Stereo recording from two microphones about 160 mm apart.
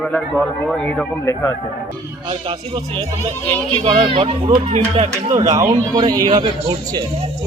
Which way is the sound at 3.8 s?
30° right (ahead or behind).